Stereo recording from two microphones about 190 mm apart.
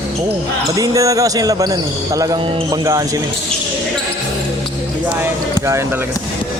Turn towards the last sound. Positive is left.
turn(degrees=-15)  # may be behind; listen again after turning